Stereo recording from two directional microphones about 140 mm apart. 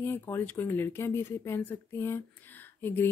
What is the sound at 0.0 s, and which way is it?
Speech, 15° left (ahead or behind).